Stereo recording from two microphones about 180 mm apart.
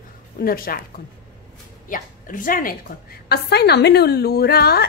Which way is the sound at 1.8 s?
50° left (ahead or behind).